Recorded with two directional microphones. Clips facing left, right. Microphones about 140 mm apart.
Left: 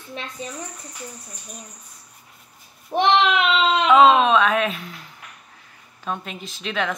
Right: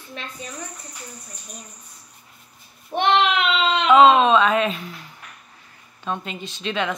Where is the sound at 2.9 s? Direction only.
30° left (ahead or behind).